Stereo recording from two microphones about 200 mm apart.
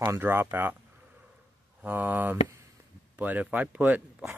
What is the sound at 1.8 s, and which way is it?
Speech, 10° right (ahead or behind).